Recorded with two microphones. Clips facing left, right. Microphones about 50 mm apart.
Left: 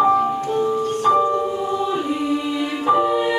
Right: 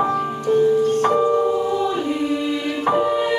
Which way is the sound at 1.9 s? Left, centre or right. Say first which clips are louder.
Even; centre.